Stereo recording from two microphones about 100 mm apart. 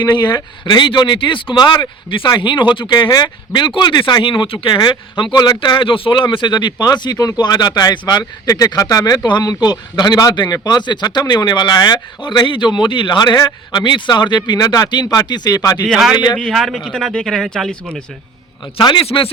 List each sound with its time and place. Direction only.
0.0 s speech: 50° left (ahead or behind)
15.9 s speech: 5° right (ahead or behind)
18.8 s speech: 50° left (ahead or behind)
19.0 s speech: 70° left (ahead or behind)